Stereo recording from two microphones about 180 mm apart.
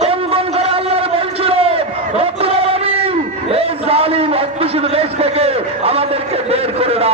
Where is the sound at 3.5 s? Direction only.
35° right (ahead or behind).